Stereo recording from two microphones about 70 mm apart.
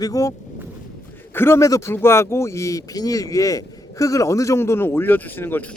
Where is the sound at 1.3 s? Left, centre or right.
Left.